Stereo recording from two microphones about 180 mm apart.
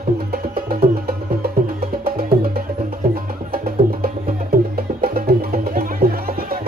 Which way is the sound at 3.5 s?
55° right (ahead or behind).